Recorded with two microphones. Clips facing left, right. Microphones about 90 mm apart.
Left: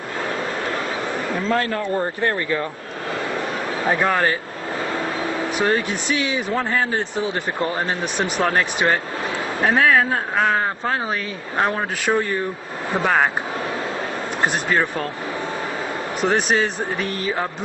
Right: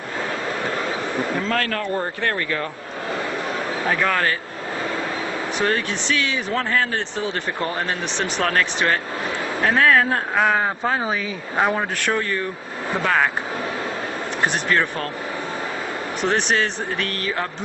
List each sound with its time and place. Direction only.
1.5 s speech: 20° left (ahead or behind)
3.9 s speech: 20° left (ahead or behind)
5.6 s a man's voice: 15° left (ahead or behind)
9.8 s speech: 5° left (ahead or behind)
12.1 s speech: 20° left (ahead or behind)
14.5 s speech: 10° left (ahead or behind)
16.3 s speech: 10° left (ahead or behind)